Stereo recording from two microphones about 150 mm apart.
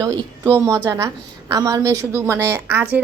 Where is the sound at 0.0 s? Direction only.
20° right (ahead or behind).